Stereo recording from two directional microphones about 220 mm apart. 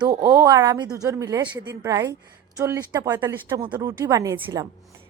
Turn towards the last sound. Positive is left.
turn(degrees=-15)  # may be behind; listen again after turning